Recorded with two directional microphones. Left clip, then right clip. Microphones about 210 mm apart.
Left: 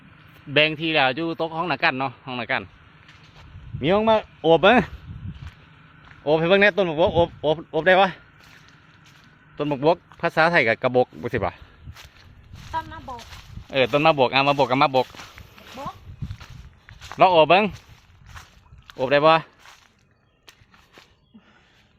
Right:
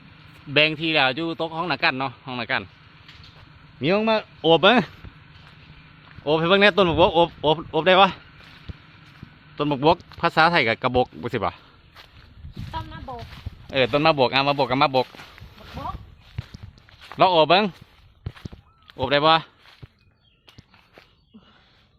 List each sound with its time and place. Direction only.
0.5 s speech: 10° left (ahead or behind)
3.8 s speech: 5° left (ahead or behind)
6.2 s speech: 5° left (ahead or behind)
9.6 s speech: centre (ahead or behind)
12.7 s a sound: 10° left (ahead or behind)
13.7 s speech: 5° left (ahead or behind)
15.1 s a sound: 55° left (ahead or behind)
17.2 s speech: centre (ahead or behind)
18.9 s speech: centre (ahead or behind)